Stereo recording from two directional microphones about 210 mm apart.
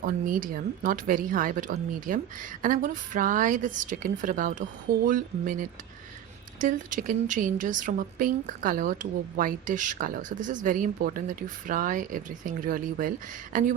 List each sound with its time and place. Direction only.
0.0 s a woman's voice: 40° right (ahead or behind)